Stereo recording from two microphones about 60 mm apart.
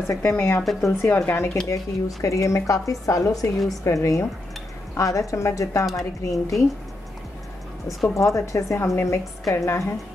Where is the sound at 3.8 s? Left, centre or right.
Left.